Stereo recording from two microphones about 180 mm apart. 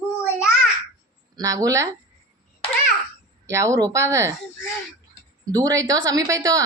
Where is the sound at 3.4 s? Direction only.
15° right (ahead or behind).